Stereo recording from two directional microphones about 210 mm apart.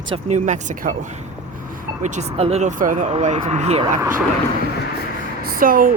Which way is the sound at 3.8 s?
15° right (ahead or behind).